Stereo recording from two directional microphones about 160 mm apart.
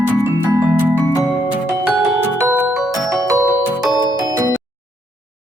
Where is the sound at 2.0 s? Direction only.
15° right (ahead or behind).